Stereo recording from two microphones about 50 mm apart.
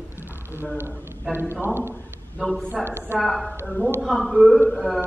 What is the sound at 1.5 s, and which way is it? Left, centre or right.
Speech, right.